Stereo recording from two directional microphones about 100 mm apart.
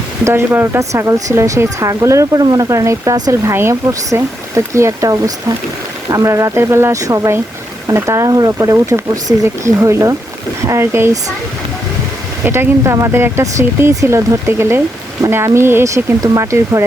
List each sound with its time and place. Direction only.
0.3 s speech: 25° right (ahead or behind)
3.5 s speech: 25° right (ahead or behind)
12.5 s speech: 25° right (ahead or behind)